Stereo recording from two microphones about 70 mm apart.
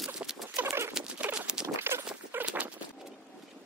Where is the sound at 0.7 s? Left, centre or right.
Right.